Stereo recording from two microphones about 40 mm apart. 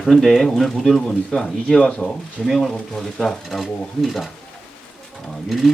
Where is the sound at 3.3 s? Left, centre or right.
Centre.